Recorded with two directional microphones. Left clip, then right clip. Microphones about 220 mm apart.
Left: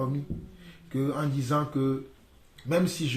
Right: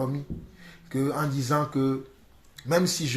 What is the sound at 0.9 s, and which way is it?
Speech, 25° right (ahead or behind).